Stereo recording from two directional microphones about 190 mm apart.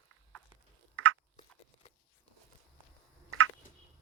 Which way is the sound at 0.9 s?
90° right.